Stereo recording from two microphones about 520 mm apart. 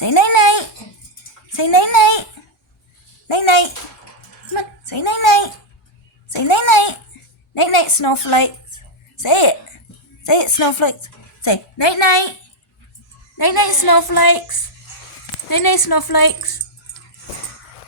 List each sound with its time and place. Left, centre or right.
0.0 s a sound: left
1.5 s a child's voice: left
3.2 s a child's voice: left
13.3 s a woman's voice: left